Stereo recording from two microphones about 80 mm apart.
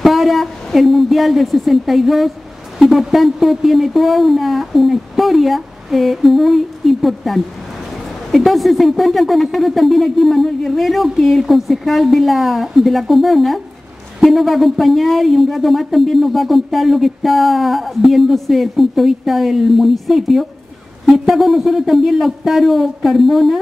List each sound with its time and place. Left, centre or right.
0.0 s speech: centre